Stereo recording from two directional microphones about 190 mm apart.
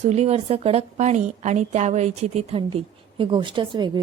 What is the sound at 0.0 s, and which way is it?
A woman's voice, 35° right (ahead or behind).